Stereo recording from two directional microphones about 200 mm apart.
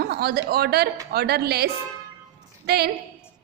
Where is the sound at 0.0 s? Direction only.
50° right (ahead or behind).